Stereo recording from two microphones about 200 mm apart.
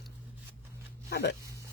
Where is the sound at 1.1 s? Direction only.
50° left (ahead or behind).